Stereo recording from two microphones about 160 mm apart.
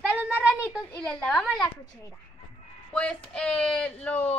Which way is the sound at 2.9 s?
5° left (ahead or behind).